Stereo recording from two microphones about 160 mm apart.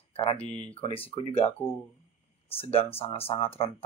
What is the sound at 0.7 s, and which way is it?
Speech, 35° left (ahead or behind).